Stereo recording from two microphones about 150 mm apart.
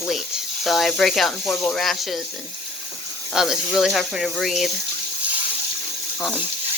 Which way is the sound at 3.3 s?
5° right (ahead or behind).